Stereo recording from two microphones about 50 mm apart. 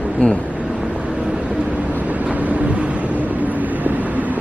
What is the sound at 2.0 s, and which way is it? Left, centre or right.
Vehicle, right.